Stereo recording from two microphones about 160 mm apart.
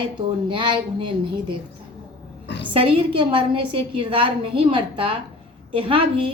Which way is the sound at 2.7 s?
35° right (ahead or behind).